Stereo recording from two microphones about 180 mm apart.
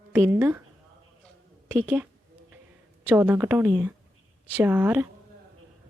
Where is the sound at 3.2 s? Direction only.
10° right (ahead or behind).